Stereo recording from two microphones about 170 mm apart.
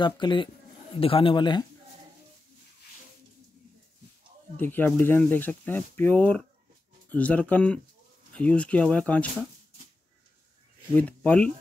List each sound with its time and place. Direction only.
0.0 s a man's voice: 25° left (ahead or behind)
4.6 s speech: 10° left (ahead or behind)
11.0 s speech: 10° left (ahead or behind)